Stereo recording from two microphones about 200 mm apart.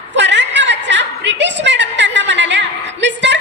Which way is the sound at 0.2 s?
60° right (ahead or behind).